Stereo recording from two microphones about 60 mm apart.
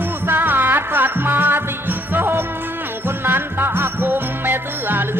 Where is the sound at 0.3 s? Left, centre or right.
Right.